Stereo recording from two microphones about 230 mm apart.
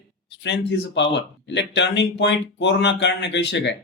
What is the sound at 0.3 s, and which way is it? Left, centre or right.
Speech, left.